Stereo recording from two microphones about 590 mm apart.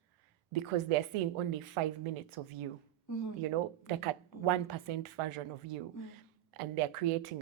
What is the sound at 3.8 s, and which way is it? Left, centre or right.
A woman's voice, right.